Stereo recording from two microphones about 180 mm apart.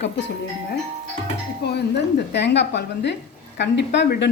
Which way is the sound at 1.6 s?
70° left (ahead or behind).